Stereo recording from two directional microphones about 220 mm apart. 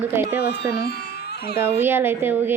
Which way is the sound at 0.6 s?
45° left (ahead or behind).